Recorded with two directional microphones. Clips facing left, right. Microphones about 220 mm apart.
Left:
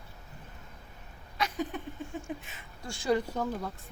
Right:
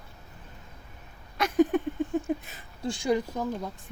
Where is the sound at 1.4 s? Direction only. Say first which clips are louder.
Right 11 dB; 50° right (ahead or behind).